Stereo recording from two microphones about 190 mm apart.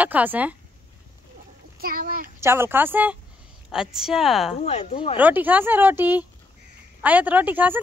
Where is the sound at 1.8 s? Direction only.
50° right (ahead or behind).